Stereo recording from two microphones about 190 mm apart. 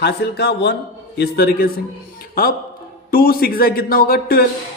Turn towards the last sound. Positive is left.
turn(degrees=55)  # may be behind; listen again after turning